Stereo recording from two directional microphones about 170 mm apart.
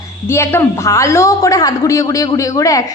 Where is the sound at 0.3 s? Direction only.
15° left (ahead or behind).